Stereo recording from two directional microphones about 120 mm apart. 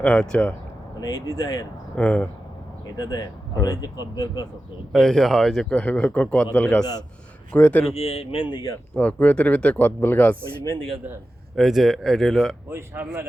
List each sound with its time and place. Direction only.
0.0 s speech: 5° left (ahead or behind)
0.9 s speech: 35° left (ahead or behind)
2.0 s speech: 10° left (ahead or behind)
2.8 s speech: 35° left (ahead or behind)
4.9 s speech: 5° left (ahead or behind)
7.9 s speech: 55° left (ahead or behind); by 8.8 s 35° left (ahead or behind)
9.0 s speech: 15° left (ahead or behind)
11.5 s speech: centre (ahead or behind)
12.7 s speech: 20° right (ahead or behind)